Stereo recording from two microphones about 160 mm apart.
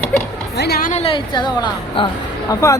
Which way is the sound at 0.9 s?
45° left (ahead or behind).